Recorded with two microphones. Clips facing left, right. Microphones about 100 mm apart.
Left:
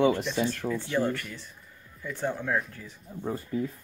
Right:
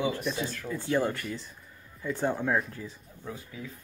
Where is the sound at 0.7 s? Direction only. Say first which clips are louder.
Left 5 dB; 35° left (ahead or behind).